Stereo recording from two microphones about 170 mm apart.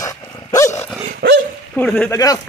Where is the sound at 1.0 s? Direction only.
80° right.